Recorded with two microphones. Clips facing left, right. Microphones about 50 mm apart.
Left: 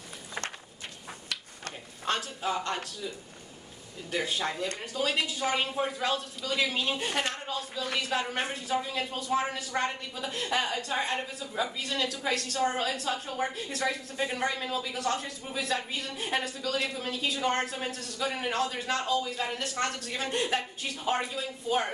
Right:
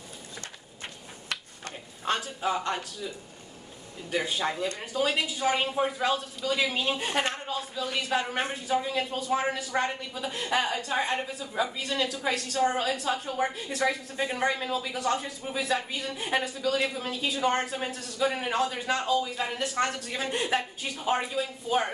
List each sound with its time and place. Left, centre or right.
2.0 s speech: centre
4.1 s speech: centre
7.1 s a woman's voice: right
7.3 s a woman's voice: centre